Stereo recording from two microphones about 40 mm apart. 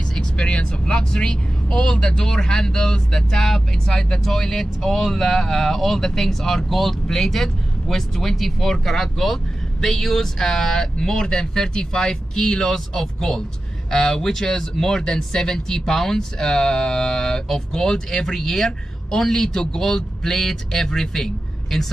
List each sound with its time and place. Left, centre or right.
0.4 s speech: left; by 21.8 s centre